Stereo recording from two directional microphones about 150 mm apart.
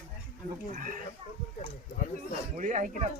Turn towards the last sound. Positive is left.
turn(degrees=-55)  # may be behind; listen again after turning